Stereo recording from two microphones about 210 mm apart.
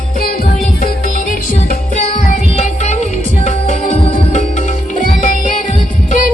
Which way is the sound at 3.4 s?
30° left (ahead or behind).